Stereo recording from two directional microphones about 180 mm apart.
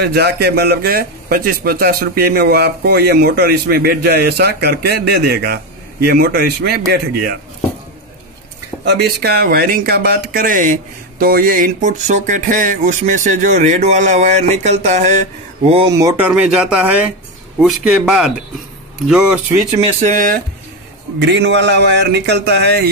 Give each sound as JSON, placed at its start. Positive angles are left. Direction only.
{"t": 0.0, "sound": "speech", "side_deg": -65}
{"t": 8.8, "sound": "speech", "side_deg": -65}
{"t": 15.9, "sound": "speech", "side_deg": -20}
{"t": 16.3, "sound": "speech", "side_deg": -5}
{"t": 20.0, "sound": "speech", "side_deg": -45}
{"t": 21.2, "sound": "speech", "side_deg": -75}